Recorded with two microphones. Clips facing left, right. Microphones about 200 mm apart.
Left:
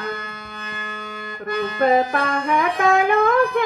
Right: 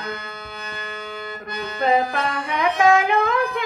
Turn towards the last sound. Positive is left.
turn(degrees=50)  # may be behind; listen again after turning